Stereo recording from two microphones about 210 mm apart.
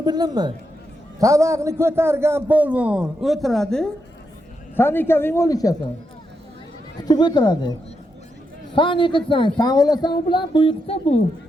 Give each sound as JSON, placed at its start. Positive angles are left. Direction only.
{"t": 0.0, "sound": "a woman's voice", "side_deg": -20}
{"t": 7.0, "sound": "speech", "side_deg": 20}